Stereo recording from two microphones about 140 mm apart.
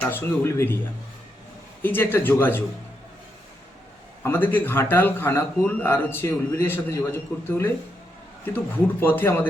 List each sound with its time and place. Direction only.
0.0 s a man's voice: 15° left (ahead or behind)
1.8 s a man's voice: 15° left (ahead or behind)
4.2 s a man's voice: 15° left (ahead or behind)